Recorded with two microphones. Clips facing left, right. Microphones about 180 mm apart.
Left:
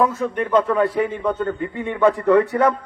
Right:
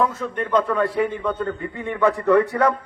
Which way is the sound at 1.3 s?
20° left (ahead or behind).